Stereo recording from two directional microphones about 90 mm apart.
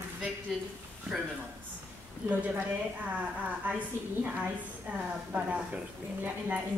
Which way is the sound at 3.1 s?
15° right (ahead or behind).